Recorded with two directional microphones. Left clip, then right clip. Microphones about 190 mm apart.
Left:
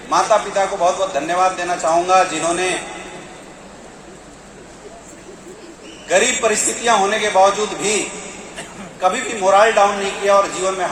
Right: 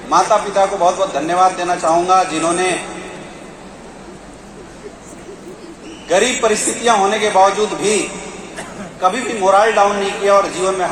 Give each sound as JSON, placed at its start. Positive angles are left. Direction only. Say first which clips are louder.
{"t": 0.1, "sound": "a man's voice", "louder": "right 2 dB", "side_deg": 20}
{"t": 6.1, "sound": "a man's voice", "louder": "right 2 dB", "side_deg": 20}